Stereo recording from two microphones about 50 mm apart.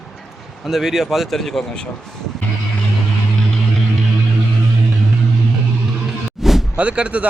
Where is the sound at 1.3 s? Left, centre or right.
Centre.